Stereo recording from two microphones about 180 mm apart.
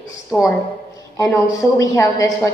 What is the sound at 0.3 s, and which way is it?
A woman's voice, 10° left (ahead or behind).